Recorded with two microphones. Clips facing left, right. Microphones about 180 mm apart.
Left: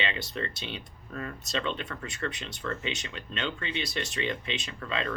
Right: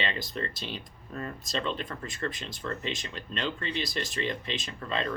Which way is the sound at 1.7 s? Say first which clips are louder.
Right 1 dB; 30° right (ahead or behind).